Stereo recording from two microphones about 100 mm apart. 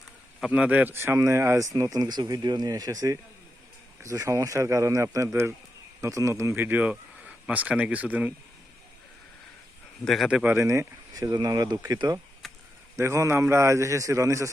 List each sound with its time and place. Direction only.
0.5 s speech: 15° right (ahead or behind)
10.0 s speech: 5° left (ahead or behind)
10.2 s speech: 10° right (ahead or behind)
10.5 s speech: 30° right (ahead or behind)
12.4 s a sound: centre (ahead or behind)
13.0 s speech: 30° right (ahead or behind)